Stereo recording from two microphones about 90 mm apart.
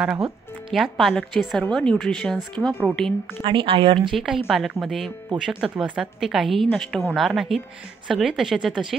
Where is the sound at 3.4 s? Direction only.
70° right (ahead or behind).